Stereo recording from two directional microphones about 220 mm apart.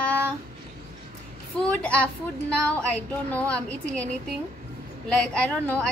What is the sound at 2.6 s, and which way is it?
A woman's voice, 5° left (ahead or behind).